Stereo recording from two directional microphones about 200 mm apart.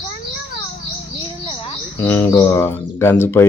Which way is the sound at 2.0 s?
10° left (ahead or behind).